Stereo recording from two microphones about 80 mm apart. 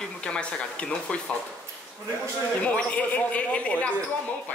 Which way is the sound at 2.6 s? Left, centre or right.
Centre.